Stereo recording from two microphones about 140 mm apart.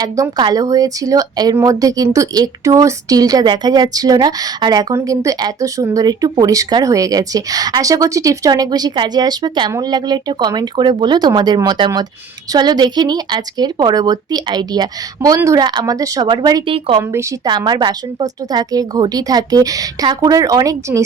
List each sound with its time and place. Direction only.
0.0 s speech: 30° right (ahead or behind)
16.7 s a woman's voice: 40° right (ahead or behind)
17.0 s speech: 20° right (ahead or behind)
17.7 s speech: 30° right (ahead or behind)